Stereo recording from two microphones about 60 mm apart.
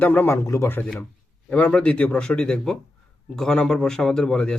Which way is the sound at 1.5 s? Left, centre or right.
Left.